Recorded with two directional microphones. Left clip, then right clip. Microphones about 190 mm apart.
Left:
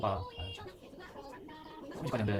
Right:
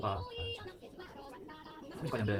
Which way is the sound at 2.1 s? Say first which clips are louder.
Left 1 dB; 40° left (ahead or behind).